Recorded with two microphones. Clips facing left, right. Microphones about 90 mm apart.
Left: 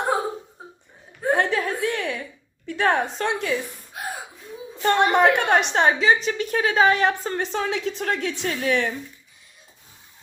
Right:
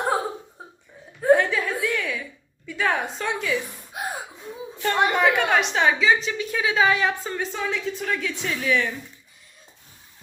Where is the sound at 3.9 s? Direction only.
20° right (ahead or behind).